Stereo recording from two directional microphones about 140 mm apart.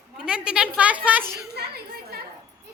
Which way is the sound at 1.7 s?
90° right.